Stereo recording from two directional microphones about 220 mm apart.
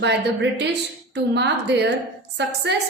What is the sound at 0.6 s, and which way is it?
A woman's voice, 50° right (ahead or behind).